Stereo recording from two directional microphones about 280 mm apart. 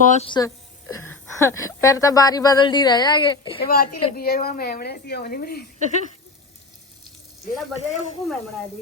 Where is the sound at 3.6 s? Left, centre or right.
Left.